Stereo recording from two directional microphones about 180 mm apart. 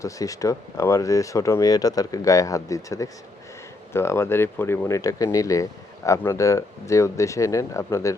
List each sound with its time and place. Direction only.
0.0 s speech: 20° left (ahead or behind)